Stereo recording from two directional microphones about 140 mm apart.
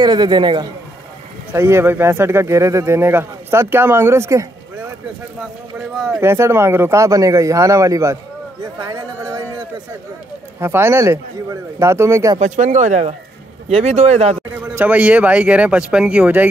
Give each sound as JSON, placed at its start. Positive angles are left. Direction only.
{"t": 0.0, "sound": "a man's voice", "side_deg": -30}
{"t": 1.5, "sound": "speech", "side_deg": -15}
{"t": 6.0, "sound": "speech", "side_deg": -20}
{"t": 10.6, "sound": "speech", "side_deg": -20}
{"t": 12.4, "sound": "speech", "side_deg": -60}
{"t": 14.7, "sound": "speech", "side_deg": -10}